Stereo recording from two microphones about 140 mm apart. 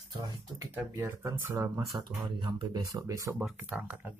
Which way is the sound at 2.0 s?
35° right (ahead or behind).